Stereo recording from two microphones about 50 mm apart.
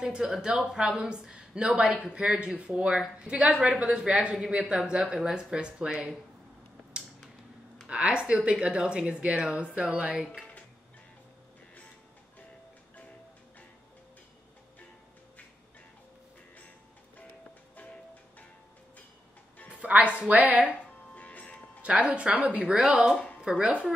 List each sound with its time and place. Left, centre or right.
0.0 s speech: centre
7.9 s speech: right
19.7 s a woman's voice: right
21.1 s music: left
21.8 s speech: right
22.7 s speech: centre